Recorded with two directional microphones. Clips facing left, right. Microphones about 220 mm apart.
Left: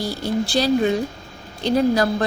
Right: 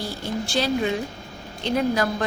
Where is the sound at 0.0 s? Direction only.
35° left (ahead or behind).